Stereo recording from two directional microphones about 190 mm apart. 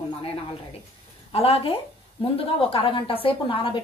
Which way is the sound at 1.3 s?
30° left (ahead or behind).